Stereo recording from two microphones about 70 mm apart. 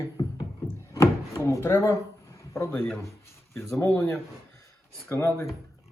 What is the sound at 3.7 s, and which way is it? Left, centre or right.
Speech, left.